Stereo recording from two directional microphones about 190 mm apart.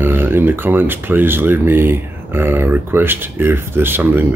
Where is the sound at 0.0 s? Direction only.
10° right (ahead or behind).